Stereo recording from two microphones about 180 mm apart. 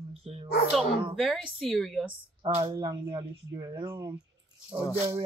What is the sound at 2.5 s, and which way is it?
Speech, 30° right (ahead or behind).